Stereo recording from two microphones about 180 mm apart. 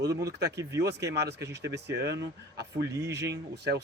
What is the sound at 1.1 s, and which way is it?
Speech, 65° right (ahead or behind).